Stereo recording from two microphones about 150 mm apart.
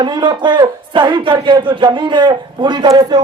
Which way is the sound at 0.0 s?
30° right (ahead or behind).